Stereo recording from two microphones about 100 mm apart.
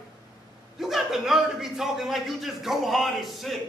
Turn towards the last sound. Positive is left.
turn(degrees=0)  # may be behind; listen again after turning